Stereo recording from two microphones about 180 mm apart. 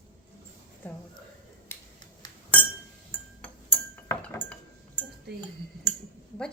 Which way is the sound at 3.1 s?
10° left (ahead or behind).